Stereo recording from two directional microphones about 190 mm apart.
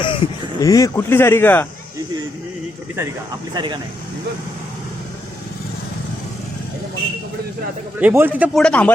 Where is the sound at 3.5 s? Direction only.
20° right (ahead or behind).